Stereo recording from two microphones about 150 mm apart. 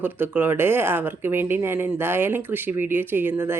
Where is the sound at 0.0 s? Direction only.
15° right (ahead or behind).